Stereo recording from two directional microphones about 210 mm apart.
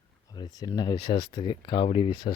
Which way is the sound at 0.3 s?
20° left (ahead or behind).